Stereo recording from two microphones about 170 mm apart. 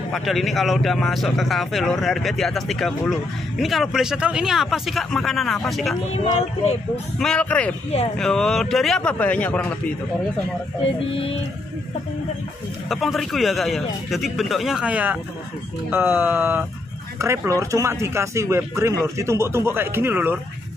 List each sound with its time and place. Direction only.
0.1 s speech: centre (ahead or behind)
6.1 s speech: 35° left (ahead or behind)
7.2 s speech: 5° left (ahead or behind)
12.9 s speech: centre (ahead or behind)